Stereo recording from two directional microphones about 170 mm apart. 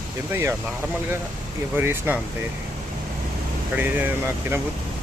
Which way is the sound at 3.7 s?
10° right (ahead or behind).